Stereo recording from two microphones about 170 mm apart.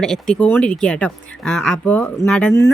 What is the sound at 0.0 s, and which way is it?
Speech, 5° left (ahead or behind).